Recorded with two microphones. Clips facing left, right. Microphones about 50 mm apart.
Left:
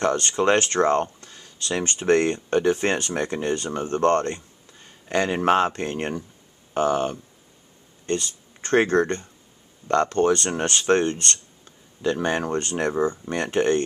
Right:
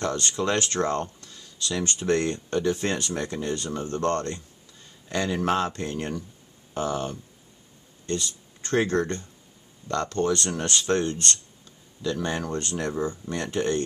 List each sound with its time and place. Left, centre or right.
0.0 s speech: left